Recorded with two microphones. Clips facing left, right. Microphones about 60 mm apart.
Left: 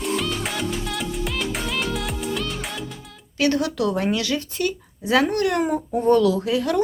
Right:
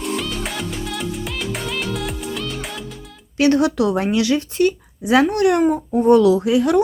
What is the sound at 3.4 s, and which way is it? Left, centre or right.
Speech, right.